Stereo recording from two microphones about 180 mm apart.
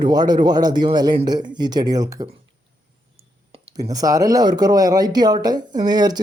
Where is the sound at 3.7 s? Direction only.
20° right (ahead or behind).